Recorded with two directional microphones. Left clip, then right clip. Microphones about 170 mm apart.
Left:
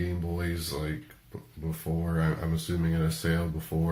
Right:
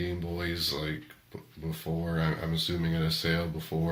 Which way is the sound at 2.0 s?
20° right (ahead or behind).